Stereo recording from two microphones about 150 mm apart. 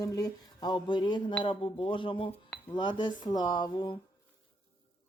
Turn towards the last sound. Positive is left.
turn(degrees=30)  # may be behind; listen again after turning